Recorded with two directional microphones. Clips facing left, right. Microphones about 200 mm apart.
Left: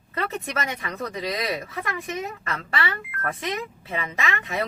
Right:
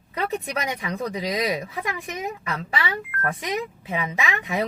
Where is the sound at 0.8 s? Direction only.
15° right (ahead or behind).